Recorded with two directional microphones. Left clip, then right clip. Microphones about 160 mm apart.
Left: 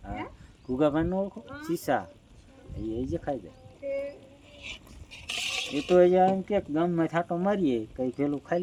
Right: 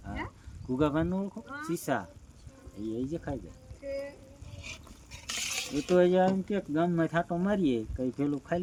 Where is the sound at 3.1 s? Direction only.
25° right (ahead or behind).